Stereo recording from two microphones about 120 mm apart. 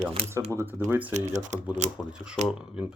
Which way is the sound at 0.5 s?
20° right (ahead or behind).